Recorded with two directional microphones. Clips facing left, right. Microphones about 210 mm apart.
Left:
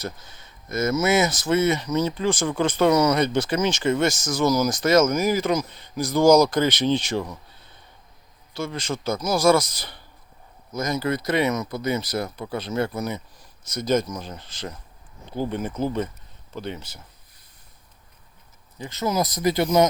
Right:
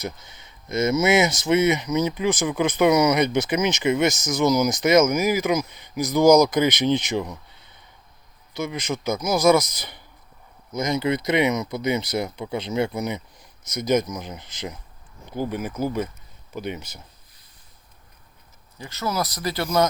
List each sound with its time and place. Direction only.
0.0 s speech: 20° right (ahead or behind)
8.5 s speech: 20° right (ahead or behind)
18.8 s speech: 20° left (ahead or behind)